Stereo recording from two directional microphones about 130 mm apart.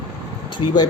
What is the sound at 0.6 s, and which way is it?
Speech, 40° left (ahead or behind).